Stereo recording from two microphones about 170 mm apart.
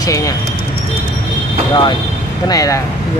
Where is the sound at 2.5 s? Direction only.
20° left (ahead or behind).